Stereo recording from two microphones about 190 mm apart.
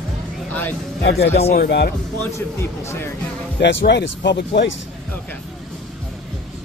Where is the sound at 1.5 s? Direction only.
55° left (ahead or behind).